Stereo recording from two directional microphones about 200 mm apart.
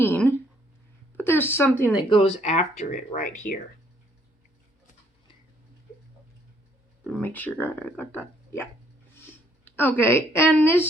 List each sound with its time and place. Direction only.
0.0 s a sound: 10° left (ahead or behind)
1.1 s a woman's voice: 10° left (ahead or behind)
2.0 s speech: 30° left (ahead or behind)
7.1 s a woman's voice: 10° left (ahead or behind)